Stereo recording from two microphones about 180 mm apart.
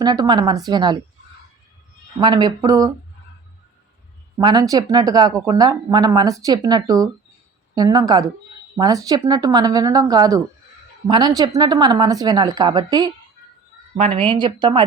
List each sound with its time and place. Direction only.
0.0 s speech: 20° right (ahead or behind)
2.1 s speech: 25° right (ahead or behind)
4.4 s speech: 20° right (ahead or behind)
13.9 s speech: 35° right (ahead or behind)